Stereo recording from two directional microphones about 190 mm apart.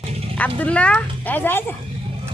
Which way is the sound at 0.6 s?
5° left (ahead or behind).